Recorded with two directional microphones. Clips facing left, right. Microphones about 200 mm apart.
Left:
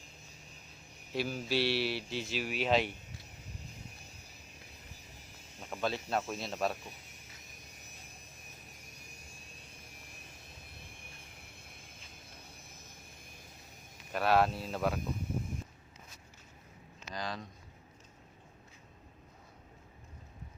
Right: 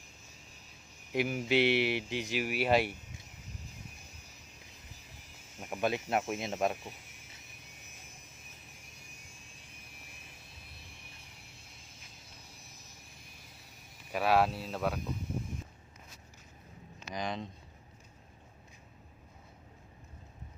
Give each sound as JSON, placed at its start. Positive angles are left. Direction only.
{"t": 1.1, "sound": "speech", "side_deg": -15}
{"t": 5.5, "sound": "speech", "side_deg": -15}
{"t": 11.3, "sound": "a sound", "side_deg": 55}
{"t": 12.6, "sound": "vehicle", "side_deg": 55}
{"t": 14.1, "sound": "speech", "side_deg": -5}
{"t": 17.1, "sound": "speech", "side_deg": -20}